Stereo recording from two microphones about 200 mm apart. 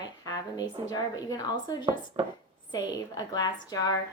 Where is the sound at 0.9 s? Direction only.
20° left (ahead or behind).